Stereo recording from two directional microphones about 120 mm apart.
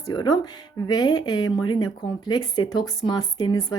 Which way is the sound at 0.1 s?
35° left (ahead or behind).